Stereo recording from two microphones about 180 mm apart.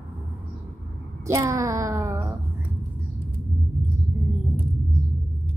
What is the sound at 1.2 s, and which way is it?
Speech, 15° right (ahead or behind).